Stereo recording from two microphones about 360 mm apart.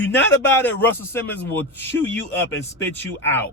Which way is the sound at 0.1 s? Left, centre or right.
Centre.